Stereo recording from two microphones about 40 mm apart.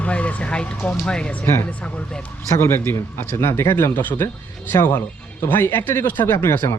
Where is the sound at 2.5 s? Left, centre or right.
Left.